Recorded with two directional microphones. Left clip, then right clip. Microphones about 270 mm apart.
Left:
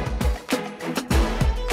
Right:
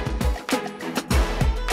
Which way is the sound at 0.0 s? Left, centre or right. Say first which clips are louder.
Right 1 dB; centre.